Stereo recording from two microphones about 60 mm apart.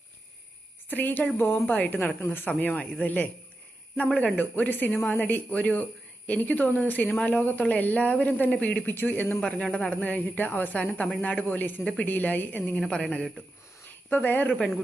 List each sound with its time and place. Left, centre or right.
0.9 s speech: left
1.6 s a woman's voice: left
8.7 s speech: left
9.4 s speech: centre; by 10.8 s left
10.8 s speech: left
12.7 s a woman's voice: centre
14.1 s speech: left